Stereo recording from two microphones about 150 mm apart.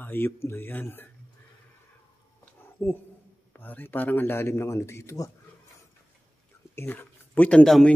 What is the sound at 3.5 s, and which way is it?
Speech, 10° left (ahead or behind).